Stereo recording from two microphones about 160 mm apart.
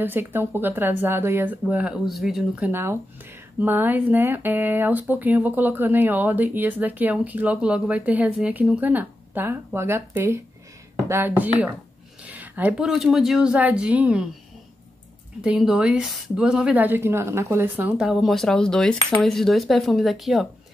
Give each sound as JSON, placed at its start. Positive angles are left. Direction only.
{"t": 0.0, "sound": "speech", "side_deg": -15}
{"t": 2.7, "sound": "speech", "side_deg": -15}
{"t": 15.4, "sound": "speech", "side_deg": -5}